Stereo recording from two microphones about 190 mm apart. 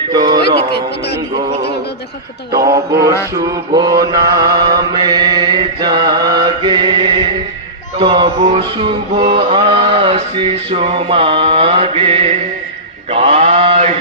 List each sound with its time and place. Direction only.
0.1 s music: 20° right (ahead or behind)
0.7 s speech: 60° left (ahead or behind)
2.6 s mantra: 15° right (ahead or behind); by 13.9 s 35° right (ahead or behind)